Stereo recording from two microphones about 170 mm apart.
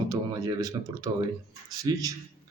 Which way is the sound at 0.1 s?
20° right (ahead or behind).